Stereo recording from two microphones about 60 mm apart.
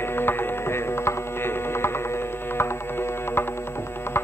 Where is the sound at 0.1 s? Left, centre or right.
Left.